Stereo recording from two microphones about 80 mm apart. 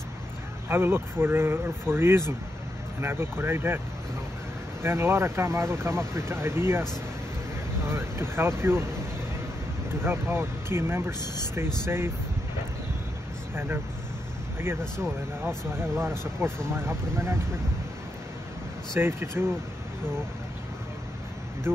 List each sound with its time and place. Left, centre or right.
0.7 s speech: right
4.8 s speech: right
9.8 s speech: right
14.6 s speech: right
18.9 s speech: right
21.7 s speech: right